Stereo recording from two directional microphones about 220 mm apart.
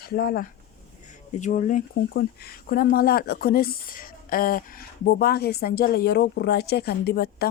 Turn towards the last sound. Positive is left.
turn(degrees=45)  # may be behind; listen again after turning